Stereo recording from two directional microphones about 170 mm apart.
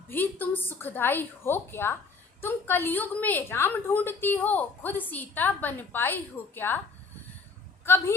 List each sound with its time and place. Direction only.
0.1 s a woman's voice: 10° left (ahead or behind)
7.9 s a woman's voice: 15° left (ahead or behind)